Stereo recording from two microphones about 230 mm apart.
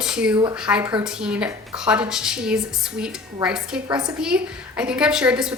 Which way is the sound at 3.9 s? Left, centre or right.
Centre.